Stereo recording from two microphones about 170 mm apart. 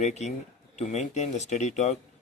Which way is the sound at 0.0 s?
40° left (ahead or behind).